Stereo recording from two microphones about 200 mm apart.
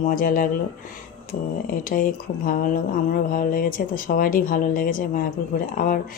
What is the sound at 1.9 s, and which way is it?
Speech, 45° left (ahead or behind).